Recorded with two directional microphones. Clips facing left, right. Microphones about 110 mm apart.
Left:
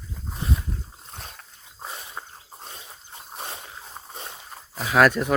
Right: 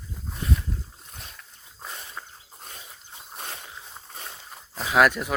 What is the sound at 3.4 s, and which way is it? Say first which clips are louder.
Dog: left 2 dB; 20° left (ahead or behind).